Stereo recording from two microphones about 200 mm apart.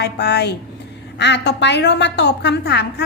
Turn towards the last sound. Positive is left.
turn(degrees=55)  # may be behind; listen again after turning